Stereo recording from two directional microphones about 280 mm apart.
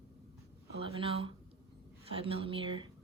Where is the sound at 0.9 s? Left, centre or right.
Centre.